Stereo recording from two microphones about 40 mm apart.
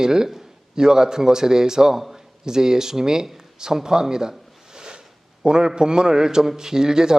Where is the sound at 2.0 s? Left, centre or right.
Centre.